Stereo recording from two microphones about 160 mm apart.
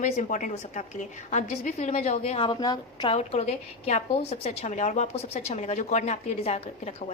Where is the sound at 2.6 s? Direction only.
25° left (ahead or behind).